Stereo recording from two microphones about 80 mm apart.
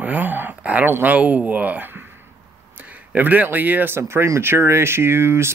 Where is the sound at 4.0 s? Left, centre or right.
Right.